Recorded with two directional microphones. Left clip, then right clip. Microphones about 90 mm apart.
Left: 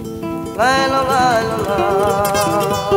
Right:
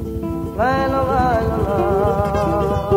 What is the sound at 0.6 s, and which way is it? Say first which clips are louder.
Music: left 4 dB; 25° left (ahead or behind).